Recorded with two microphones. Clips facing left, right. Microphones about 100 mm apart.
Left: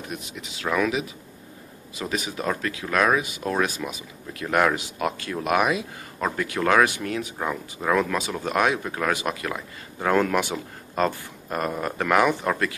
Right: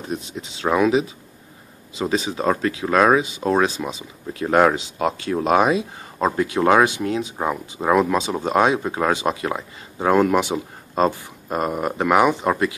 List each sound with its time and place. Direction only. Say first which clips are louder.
0.1 s speech: right 6 dB; 30° right (ahead or behind)